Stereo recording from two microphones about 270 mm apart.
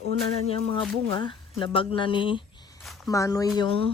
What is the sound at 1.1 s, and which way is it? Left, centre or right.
Speech, centre.